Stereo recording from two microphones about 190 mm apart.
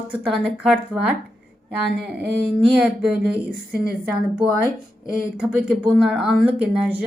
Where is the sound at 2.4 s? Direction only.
5° right (ahead or behind).